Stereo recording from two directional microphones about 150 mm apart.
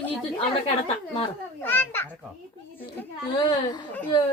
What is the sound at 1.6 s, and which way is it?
Speech, 15° left (ahead or behind).